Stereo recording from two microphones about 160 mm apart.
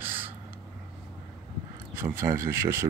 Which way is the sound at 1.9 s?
15° right (ahead or behind).